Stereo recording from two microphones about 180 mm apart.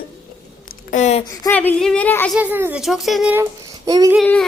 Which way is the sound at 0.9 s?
40° left (ahead or behind).